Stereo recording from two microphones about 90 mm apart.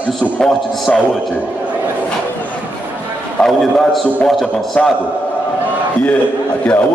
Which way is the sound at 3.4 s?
5° left (ahead or behind).